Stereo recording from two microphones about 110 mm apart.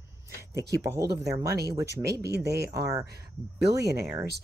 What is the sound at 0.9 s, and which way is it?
Speech, 30° right (ahead or behind).